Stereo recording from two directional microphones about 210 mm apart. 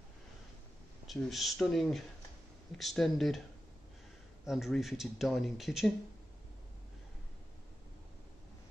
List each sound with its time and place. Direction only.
1.0 s speech: centre (ahead or behind)
4.5 s speech: centre (ahead or behind)